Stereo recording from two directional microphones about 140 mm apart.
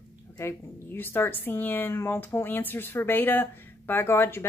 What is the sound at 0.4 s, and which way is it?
A woman's voice, 15° left (ahead or behind).